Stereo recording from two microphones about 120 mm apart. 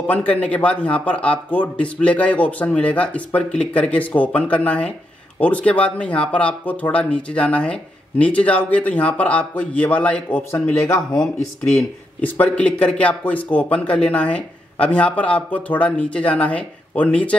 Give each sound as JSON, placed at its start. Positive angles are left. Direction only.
{"t": 0.0, "sound": "speech", "side_deg": 10}
{"t": 12.2, "sound": "speech", "side_deg": 15}